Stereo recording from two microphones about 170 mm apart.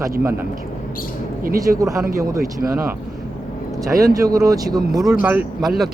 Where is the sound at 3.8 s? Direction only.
20° right (ahead or behind).